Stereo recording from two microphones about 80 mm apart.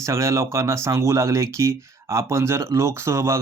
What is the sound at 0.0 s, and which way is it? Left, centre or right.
Speech, right.